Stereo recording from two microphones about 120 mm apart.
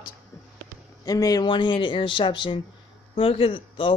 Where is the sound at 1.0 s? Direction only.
30° left (ahead or behind).